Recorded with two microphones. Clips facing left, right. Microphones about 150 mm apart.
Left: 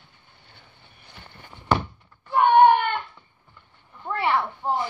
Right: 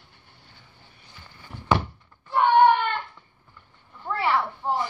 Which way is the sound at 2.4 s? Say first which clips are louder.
Left 2 dB; 60° left (ahead or behind).